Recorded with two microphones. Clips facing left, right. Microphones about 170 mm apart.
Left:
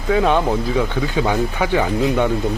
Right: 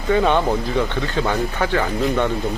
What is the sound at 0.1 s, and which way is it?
Speech, centre (ahead or behind).